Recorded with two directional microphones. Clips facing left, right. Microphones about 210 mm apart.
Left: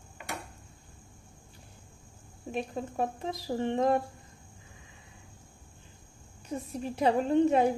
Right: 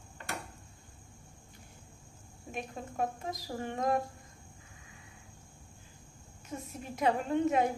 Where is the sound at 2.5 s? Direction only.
30° left (ahead or behind).